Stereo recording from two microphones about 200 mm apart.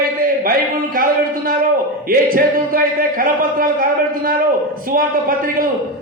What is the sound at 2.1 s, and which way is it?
A man's voice, 45° right (ahead or behind).